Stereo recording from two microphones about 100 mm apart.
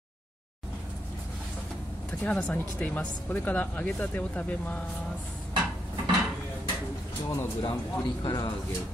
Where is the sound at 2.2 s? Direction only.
15° left (ahead or behind).